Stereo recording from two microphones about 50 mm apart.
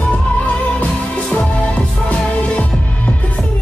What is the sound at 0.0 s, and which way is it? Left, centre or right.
Music, left.